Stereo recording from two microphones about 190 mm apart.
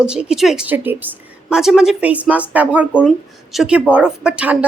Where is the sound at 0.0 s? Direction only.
5° right (ahead or behind).